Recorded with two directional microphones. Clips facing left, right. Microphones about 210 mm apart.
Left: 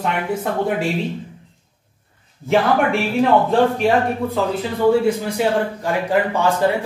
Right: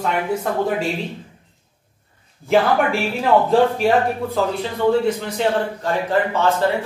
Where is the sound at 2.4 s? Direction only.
Centre (ahead or behind).